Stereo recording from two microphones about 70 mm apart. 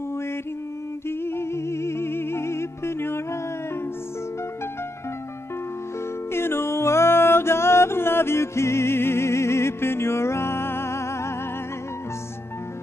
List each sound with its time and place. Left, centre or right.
1.0 s music: left
6.3 s music: left